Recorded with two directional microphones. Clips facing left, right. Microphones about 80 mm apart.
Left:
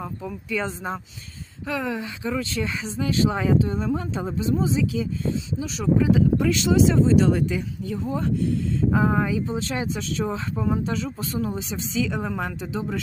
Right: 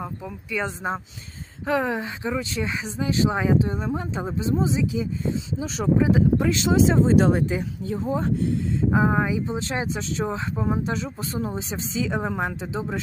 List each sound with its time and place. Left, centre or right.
0.0 s speech: centre
1.6 s speech: right
2.4 s speech: centre
5.5 s speech: right
6.0 s speech: right
7.3 s speech: right